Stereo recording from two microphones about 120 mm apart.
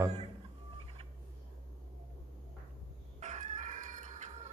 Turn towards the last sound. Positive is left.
turn(degrees=-80)